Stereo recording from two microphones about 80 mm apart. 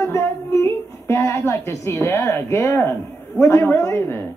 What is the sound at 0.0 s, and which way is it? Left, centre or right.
Speech, left.